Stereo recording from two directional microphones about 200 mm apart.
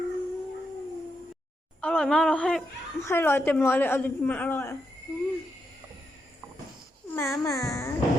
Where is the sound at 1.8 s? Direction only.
5° left (ahead or behind).